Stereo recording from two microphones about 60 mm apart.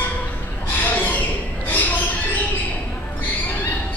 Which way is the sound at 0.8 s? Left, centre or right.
Left.